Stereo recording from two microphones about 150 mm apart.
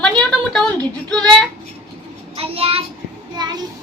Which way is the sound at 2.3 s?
40° right (ahead or behind).